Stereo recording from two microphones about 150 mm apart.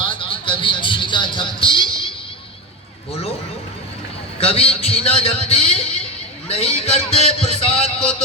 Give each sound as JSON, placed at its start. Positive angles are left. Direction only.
{"t": 0.0, "sound": "music", "side_deg": 35}
{"t": 3.1, "sound": "a man's voice", "side_deg": 40}
{"t": 4.4, "sound": "a man's voice", "side_deg": 40}